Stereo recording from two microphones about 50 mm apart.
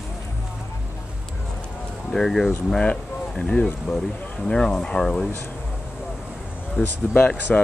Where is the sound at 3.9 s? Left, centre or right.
Centre.